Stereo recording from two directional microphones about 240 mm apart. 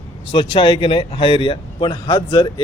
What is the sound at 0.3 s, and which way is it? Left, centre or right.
Speech, left.